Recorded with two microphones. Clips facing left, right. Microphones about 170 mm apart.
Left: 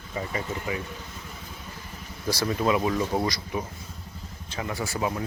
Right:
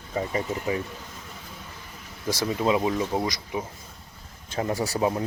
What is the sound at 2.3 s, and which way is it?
Speech, 20° right (ahead or behind).